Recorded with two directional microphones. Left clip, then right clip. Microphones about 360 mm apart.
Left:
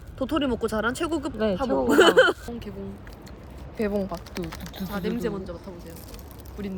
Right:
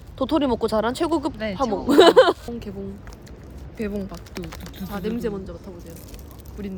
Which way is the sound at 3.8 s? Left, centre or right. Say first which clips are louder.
Left 3 dB; centre.